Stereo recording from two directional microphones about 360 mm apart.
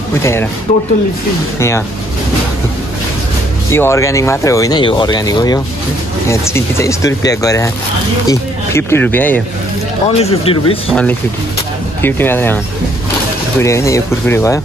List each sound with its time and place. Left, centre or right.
0.2 s speech: centre
3.7 s speech: centre
10.0 s speech: centre
10.9 s speech: centre
13.6 s speech: centre